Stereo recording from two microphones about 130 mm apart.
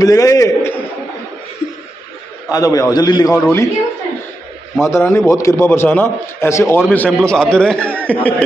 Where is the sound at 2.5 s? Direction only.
25° left (ahead or behind).